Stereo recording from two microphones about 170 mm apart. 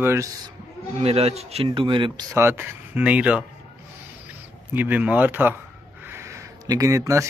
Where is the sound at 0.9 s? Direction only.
35° right (ahead or behind).